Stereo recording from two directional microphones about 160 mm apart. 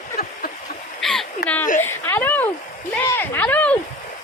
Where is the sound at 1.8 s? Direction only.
15° left (ahead or behind).